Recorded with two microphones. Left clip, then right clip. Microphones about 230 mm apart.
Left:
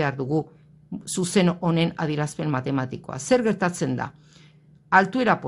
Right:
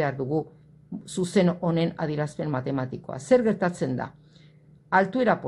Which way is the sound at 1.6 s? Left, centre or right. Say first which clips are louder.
Left 2 dB; left.